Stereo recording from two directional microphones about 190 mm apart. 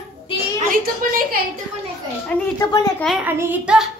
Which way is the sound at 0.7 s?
50° right (ahead or behind).